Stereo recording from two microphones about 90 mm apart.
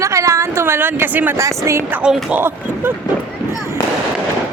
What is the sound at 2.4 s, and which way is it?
Speech, 25° right (ahead or behind).